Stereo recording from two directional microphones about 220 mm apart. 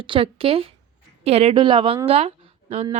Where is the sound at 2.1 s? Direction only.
25° right (ahead or behind).